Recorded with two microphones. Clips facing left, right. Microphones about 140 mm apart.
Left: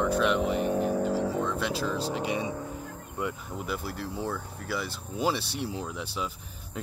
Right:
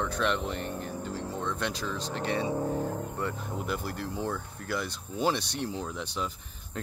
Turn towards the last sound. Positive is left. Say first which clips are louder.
# even
turn(degrees=5)  # may be behind; listen again after turning